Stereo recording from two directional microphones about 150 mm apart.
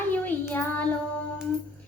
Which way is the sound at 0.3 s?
10° left (ahead or behind).